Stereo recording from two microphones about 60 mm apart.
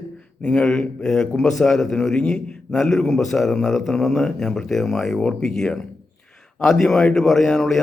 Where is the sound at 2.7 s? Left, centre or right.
Centre.